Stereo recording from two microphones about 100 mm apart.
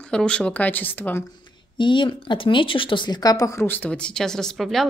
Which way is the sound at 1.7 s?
55° left (ahead or behind).